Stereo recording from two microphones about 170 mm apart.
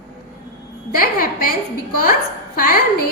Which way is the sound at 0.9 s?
60° left (ahead or behind).